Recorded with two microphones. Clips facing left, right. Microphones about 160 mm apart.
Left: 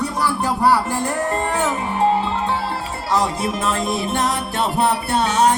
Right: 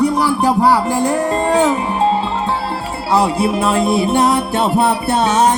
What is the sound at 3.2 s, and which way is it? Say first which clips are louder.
Speech: right 6 dB; 15° right (ahead or behind).